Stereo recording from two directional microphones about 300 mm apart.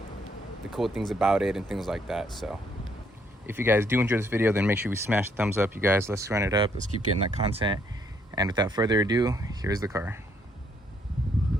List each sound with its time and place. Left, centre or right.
0.7 s speech: centre